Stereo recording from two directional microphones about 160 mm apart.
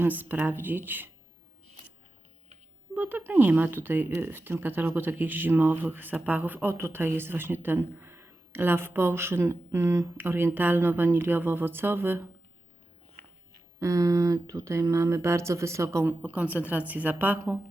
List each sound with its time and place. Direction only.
0.0 s speech: 10° right (ahead or behind)
2.9 s speech: 10° right (ahead or behind)
13.7 s speech: 20° right (ahead or behind)